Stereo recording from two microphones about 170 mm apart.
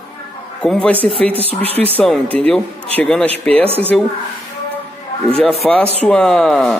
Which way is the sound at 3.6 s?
35° right (ahead or behind).